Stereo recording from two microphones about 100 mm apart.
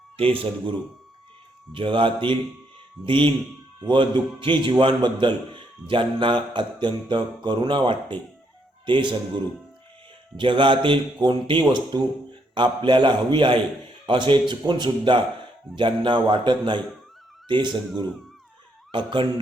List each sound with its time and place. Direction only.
0.3 s speech: 60° right (ahead or behind)
3.8 s mantra: 50° right (ahead or behind)
5.2 s a man's voice: 50° right (ahead or behind)
5.9 s mantra: 55° right (ahead or behind)
10.3 s mantra: 55° right (ahead or behind)
18.9 s speech: 55° right (ahead or behind)